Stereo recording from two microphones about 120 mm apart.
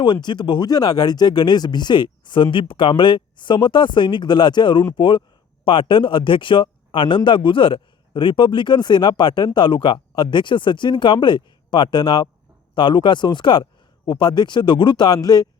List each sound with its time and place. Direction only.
0.0 s speech: 40° left (ahead or behind)